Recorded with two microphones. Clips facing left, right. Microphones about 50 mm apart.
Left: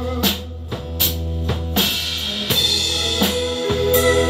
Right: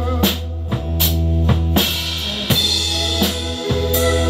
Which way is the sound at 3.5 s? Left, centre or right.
Centre.